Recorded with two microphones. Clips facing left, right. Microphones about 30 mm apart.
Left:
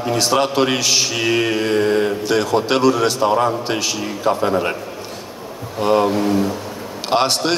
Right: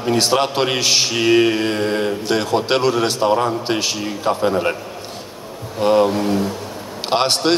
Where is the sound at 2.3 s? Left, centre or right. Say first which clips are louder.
Right 1 dB; right.